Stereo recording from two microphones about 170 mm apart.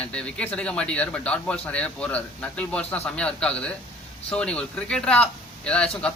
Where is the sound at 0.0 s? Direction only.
5° left (ahead or behind).